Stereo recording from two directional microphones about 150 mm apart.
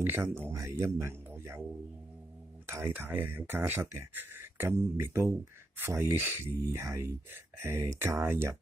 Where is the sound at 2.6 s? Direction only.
15° right (ahead or behind).